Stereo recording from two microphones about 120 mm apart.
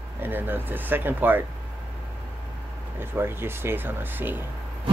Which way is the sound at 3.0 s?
20° right (ahead or behind).